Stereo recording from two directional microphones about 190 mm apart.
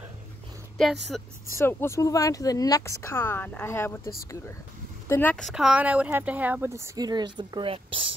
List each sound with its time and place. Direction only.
1.1 s speech: centre (ahead or behind)
1.6 s speech: 10° left (ahead or behind); by 8.1 s 30° right (ahead or behind)